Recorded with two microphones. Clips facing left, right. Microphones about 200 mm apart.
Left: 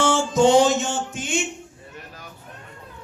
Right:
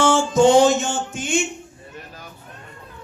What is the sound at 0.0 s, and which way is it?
Music, 50° right (ahead or behind).